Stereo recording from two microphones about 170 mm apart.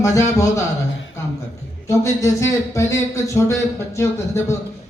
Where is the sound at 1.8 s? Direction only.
15° left (ahead or behind).